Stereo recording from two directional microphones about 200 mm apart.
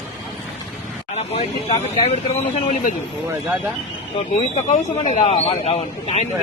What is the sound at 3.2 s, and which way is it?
Speech, 10° right (ahead or behind).